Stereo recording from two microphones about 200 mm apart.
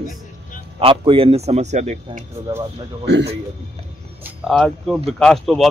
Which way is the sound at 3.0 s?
60° right (ahead or behind).